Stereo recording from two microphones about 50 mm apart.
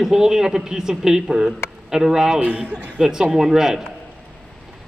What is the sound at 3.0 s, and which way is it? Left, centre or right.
Speech, centre.